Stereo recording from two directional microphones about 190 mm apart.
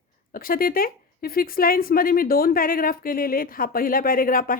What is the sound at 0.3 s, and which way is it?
Speech, 50° left (ahead or behind).